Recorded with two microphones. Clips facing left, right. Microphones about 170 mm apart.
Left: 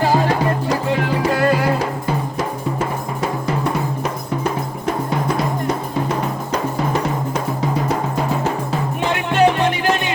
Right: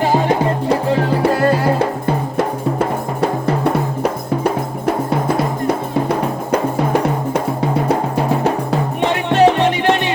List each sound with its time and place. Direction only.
0.0 s music: 20° right (ahead or behind)
2.4 s music: 60° right (ahead or behind)
6.5 s music: 60° right (ahead or behind)
9.0 s music: 30° right (ahead or behind)